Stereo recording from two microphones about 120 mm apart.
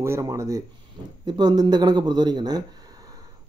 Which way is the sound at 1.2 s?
35° right (ahead or behind).